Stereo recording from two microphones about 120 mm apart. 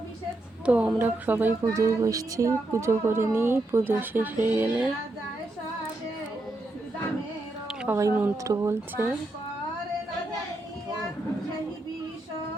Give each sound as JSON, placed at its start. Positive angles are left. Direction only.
{"t": 0.6, "sound": "speech", "side_deg": -10}
{"t": 1.6, "sound": "speech", "side_deg": -25}
{"t": 7.9, "sound": "speech", "side_deg": -20}